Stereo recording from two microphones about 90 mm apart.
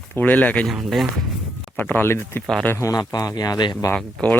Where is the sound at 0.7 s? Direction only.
Centre (ahead or behind).